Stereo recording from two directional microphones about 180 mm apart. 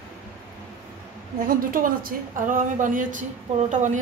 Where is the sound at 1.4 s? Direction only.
50° right (ahead or behind).